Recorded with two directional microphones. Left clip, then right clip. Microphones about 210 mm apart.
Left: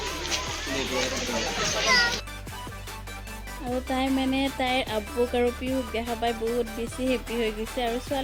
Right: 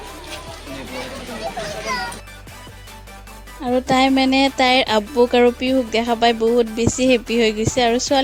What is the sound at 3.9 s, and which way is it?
Speech, 45° right (ahead or behind).